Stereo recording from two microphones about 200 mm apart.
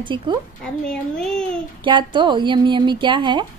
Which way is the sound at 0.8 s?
5° left (ahead or behind).